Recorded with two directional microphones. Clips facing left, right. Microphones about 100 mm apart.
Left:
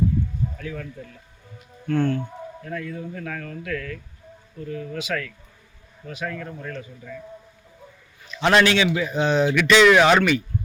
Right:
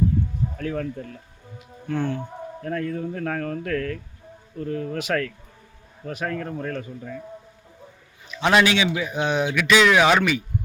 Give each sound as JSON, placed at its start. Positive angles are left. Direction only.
{"t": 0.5, "sound": "speech", "side_deg": -45}
{"t": 1.9, "sound": "a man's voice", "side_deg": -10}
{"t": 2.6, "sound": "speech", "side_deg": -40}
{"t": 8.3, "sound": "a man's voice", "side_deg": -10}